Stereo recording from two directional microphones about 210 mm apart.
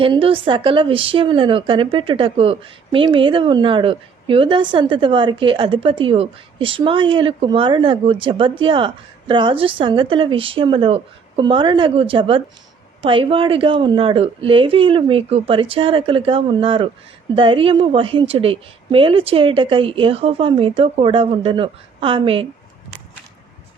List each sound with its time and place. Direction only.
0.0 s a woman's voice: 25° right (ahead or behind)